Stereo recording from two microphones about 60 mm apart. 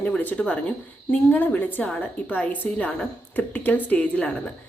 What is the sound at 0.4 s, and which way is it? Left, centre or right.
Speech, centre.